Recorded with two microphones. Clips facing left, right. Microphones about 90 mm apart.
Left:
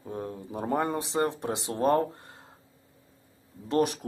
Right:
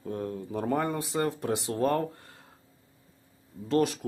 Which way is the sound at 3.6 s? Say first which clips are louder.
Even; 20° left (ahead or behind).